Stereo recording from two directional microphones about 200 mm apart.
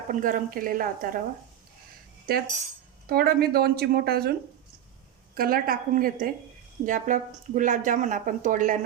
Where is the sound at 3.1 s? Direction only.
50° right (ahead or behind).